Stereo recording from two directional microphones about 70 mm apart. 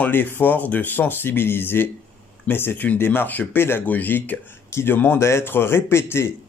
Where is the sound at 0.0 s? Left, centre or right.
Left.